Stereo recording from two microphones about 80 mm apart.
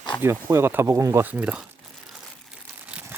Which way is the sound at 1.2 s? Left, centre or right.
Centre.